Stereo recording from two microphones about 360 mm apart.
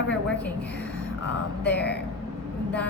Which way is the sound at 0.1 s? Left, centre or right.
Centre.